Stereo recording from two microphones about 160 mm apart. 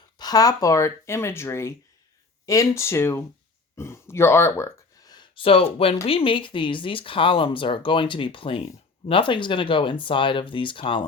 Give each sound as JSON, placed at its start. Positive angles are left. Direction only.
{"t": 0.2, "sound": "speech", "side_deg": 25}